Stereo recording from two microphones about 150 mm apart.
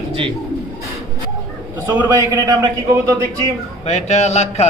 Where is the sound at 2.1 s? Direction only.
25° right (ahead or behind).